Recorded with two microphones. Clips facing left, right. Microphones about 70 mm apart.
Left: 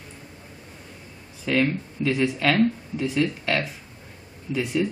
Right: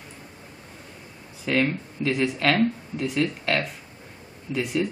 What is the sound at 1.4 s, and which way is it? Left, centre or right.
A man's voice, centre.